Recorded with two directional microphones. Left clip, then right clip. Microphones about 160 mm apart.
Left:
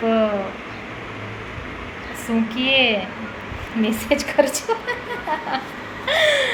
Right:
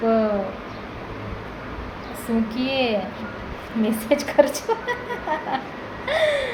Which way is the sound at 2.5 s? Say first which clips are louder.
Left 6 dB; 5° right (ahead or behind).